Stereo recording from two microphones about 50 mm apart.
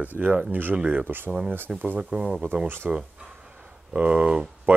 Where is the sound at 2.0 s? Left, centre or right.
Centre.